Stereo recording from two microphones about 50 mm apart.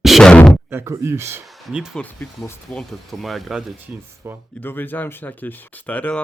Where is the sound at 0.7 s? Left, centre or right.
Right.